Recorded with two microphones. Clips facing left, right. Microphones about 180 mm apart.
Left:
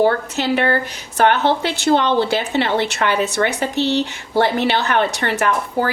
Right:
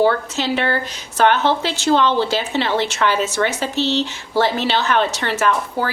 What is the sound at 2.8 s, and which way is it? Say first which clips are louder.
A woman's voice: even; 60° left (ahead or behind).